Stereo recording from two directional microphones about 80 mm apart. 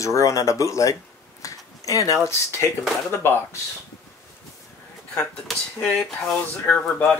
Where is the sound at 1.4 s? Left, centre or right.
Left.